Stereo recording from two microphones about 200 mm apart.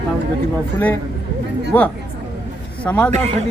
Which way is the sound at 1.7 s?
10° left (ahead or behind).